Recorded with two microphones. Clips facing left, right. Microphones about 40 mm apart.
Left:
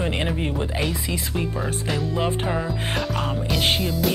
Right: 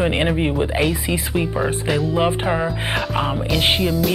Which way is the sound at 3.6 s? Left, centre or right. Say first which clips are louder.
Right 4 dB; centre.